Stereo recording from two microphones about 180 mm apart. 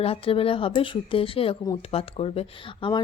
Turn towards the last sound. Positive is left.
turn(degrees=25)  # may be behind; listen again after turning